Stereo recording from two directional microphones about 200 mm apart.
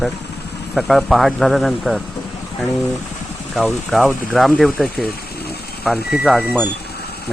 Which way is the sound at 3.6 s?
Centre (ahead or behind).